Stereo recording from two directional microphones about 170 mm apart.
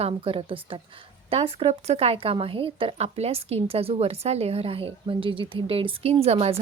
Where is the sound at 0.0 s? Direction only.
30° right (ahead or behind).